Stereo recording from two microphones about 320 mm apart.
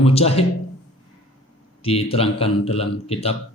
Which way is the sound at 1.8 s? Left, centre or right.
Centre.